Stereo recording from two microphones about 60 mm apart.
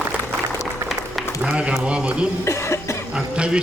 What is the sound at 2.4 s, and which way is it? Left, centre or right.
Cough, left.